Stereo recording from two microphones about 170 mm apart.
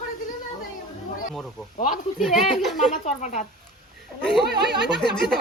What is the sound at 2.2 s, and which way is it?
Speech, centre (ahead or behind).